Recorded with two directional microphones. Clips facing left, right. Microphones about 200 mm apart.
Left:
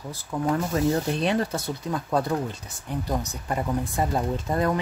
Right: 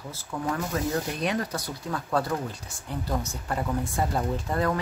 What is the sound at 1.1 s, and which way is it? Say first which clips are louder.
Speech: left 4 dB; 30° left (ahead or behind).